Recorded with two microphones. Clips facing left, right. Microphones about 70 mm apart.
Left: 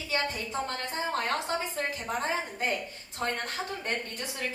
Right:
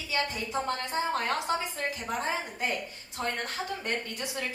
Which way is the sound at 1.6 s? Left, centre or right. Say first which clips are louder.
Left 1 dB; left.